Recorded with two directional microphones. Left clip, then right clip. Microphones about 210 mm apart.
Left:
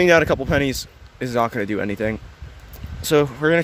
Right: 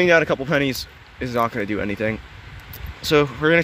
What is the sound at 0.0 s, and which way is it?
Speech, 30° left (ahead or behind).